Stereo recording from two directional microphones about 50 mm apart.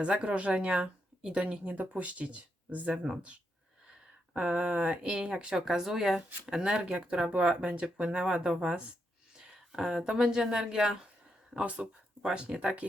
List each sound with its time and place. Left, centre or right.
0.0 s speech: right
2.9 s speech: centre
7.3 s speech: right
9.6 s speech: centre
11.6 s speech: right